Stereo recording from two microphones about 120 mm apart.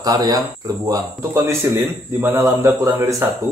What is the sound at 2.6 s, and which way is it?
Speech, 25° right (ahead or behind).